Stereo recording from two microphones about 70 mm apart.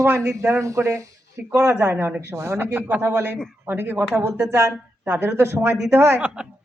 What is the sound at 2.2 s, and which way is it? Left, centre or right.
Speech, right.